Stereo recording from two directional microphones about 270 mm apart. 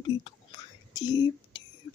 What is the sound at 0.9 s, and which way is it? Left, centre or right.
Whispering, centre.